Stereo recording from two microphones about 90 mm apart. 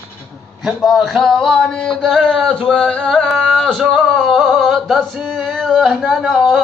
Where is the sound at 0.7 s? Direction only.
Centre (ahead or behind).